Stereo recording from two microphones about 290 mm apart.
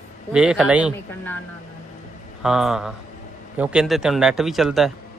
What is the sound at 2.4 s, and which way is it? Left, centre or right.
A man's voice, centre.